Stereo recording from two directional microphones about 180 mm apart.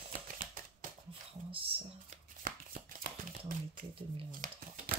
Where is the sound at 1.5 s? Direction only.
30° right (ahead or behind).